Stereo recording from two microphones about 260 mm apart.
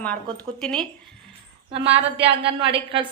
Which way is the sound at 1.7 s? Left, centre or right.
Right.